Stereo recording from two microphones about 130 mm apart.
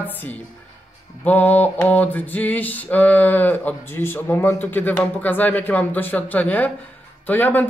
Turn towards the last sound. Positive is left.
turn(degrees=15)  # may be behind; listen again after turning